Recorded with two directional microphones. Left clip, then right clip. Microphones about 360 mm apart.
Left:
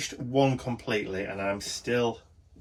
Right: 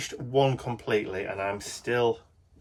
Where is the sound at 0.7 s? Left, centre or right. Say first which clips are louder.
Right 2 dB; centre.